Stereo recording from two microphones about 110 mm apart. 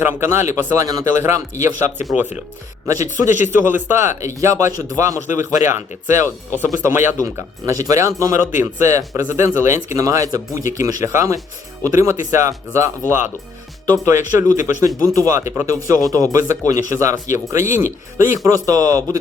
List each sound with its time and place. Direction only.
0.0 s speech: 20° right (ahead or behind)
3.4 s a man's voice: 20° right (ahead or behind); by 19.2 s 35° right (ahead or behind)